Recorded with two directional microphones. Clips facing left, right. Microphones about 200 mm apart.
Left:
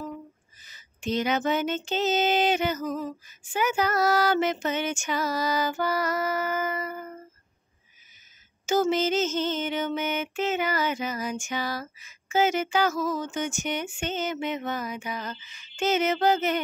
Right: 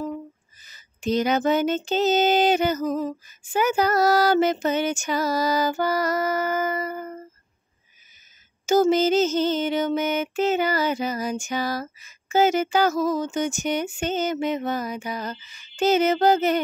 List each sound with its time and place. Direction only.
0.7 s music: 40° right (ahead or behind)
8.6 s music: 40° right (ahead or behind)